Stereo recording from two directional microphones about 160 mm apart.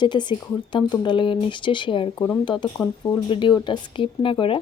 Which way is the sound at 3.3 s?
30° left (ahead or behind).